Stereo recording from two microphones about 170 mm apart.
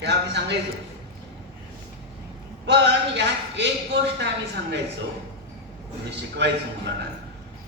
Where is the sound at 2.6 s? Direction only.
90° right.